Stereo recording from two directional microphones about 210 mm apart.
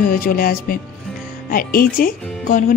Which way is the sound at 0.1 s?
45° left (ahead or behind).